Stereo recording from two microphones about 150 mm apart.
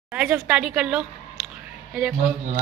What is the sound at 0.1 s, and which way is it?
A woman's voice, 10° right (ahead or behind).